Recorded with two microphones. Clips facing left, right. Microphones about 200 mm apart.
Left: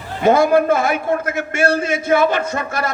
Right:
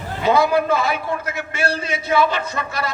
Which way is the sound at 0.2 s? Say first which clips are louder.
Left 4 dB; 50° left (ahead or behind).